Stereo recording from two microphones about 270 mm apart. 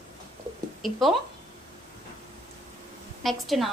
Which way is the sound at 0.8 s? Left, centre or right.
Centre.